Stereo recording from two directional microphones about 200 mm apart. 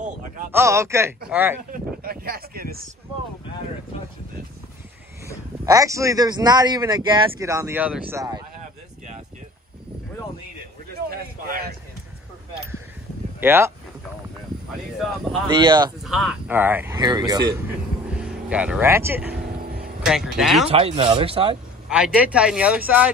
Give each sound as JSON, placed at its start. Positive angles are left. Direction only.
{"t": 0.5, "sound": "a man's voice", "side_deg": -15}
{"t": 1.7, "sound": "speech", "side_deg": -45}
{"t": 5.7, "sound": "a man's voice", "side_deg": -15}
{"t": 11.1, "sound": "a sound", "side_deg": -45}
{"t": 13.4, "sound": "speech", "side_deg": -10}
{"t": 15.6, "sound": "speech", "side_deg": -20}
{"t": 16.0, "sound": "a man's voice", "side_deg": 0}
{"t": 18.1, "sound": "speech", "side_deg": -5}
{"t": 20.6, "sound": "speech", "side_deg": -30}
{"t": 21.8, "sound": "speech", "side_deg": -5}